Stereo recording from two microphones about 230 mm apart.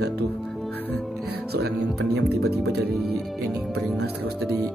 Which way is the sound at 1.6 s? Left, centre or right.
Right.